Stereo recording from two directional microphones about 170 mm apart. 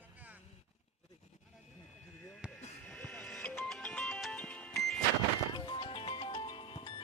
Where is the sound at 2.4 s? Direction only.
5° right (ahead or behind).